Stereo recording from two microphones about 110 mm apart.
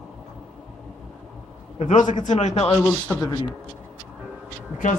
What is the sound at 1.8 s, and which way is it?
Speech, 90° left.